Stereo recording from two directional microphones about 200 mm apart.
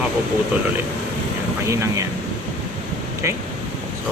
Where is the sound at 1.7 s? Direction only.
15° right (ahead or behind).